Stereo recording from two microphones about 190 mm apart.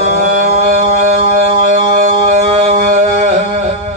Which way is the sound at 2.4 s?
35° right (ahead or behind).